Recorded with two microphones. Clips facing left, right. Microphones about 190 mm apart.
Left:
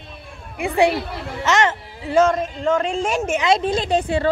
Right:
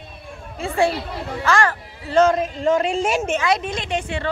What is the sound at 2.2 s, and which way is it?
Speech, 5° right (ahead or behind).